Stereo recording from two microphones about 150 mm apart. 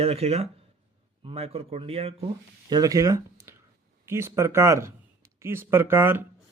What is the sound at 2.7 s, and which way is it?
A man's voice, 25° right (ahead or behind).